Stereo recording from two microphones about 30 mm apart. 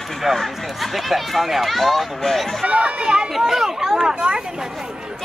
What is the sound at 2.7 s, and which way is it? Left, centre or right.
Speech, right.